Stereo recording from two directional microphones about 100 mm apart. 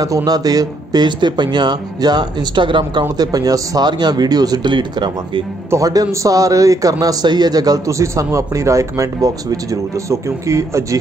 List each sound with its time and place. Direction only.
0.0 s speech: 40° right (ahead or behind)
5.7 s a man's voice: 35° right (ahead or behind)